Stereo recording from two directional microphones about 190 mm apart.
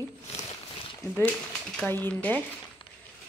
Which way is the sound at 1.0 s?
15° left (ahead or behind).